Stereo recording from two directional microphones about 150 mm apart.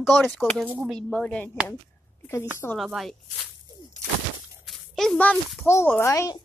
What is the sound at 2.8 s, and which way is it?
Speech, centre (ahead or behind).